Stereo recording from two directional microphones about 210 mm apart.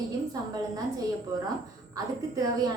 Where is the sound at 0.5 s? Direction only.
15° right (ahead or behind).